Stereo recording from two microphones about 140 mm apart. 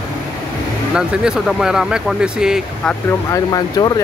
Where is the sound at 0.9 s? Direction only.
5° right (ahead or behind).